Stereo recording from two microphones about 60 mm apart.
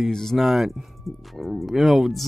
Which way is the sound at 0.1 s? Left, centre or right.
Centre.